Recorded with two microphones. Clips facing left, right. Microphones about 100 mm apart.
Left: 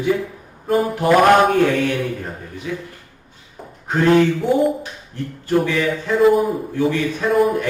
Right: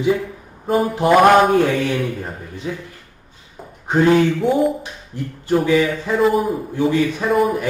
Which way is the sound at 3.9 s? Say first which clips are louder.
Even; centre (ahead or behind).